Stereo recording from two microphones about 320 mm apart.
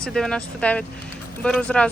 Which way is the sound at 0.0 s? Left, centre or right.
Centre.